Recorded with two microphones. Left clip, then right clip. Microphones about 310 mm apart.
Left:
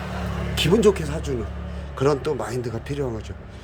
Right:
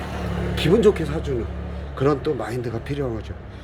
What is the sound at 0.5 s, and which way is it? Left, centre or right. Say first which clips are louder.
Speech: right 1 dB; centre.